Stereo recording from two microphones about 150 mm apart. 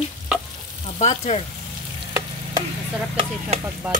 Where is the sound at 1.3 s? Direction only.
40° left (ahead or behind).